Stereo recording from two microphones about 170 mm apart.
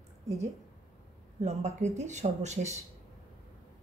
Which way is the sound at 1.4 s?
40° right (ahead or behind).